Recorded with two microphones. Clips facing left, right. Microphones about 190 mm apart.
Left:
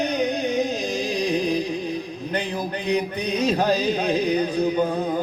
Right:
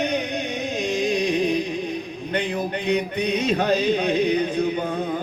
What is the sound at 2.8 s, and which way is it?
Music, 35° left (ahead or behind).